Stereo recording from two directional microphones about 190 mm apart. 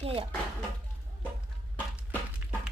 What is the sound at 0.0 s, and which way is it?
Speech, 30° right (ahead or behind).